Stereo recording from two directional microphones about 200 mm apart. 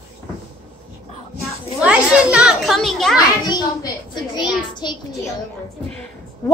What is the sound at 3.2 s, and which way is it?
A child's voice, 20° left (ahead or behind).